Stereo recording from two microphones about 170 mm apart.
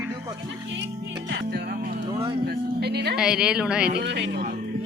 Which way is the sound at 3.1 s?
5° right (ahead or behind).